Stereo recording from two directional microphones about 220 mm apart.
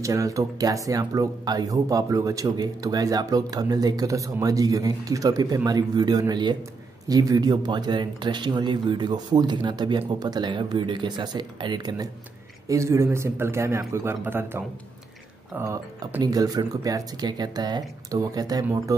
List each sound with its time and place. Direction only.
0.0 s speech: 15° right (ahead or behind)